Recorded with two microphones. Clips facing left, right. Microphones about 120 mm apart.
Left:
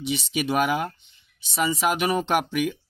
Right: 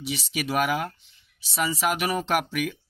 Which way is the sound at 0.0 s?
Centre (ahead or behind).